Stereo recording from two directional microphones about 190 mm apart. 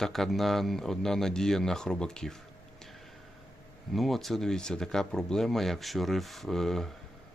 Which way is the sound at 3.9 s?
Centre (ahead or behind).